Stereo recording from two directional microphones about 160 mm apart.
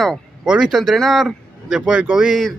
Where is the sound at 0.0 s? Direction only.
5° right (ahead or behind).